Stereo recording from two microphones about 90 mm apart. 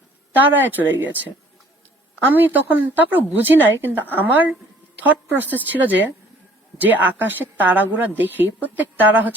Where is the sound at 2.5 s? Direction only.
20° right (ahead or behind).